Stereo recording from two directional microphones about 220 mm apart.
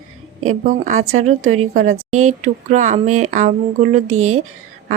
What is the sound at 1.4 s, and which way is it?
Speech, 70° right (ahead or behind).